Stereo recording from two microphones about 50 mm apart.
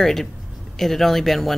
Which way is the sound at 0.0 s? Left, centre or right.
Centre.